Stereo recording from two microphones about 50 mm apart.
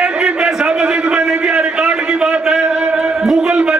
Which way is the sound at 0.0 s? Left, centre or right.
Right.